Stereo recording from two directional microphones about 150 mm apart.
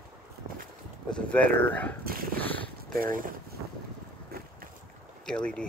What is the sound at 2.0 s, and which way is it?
Dog, 75° right (ahead or behind).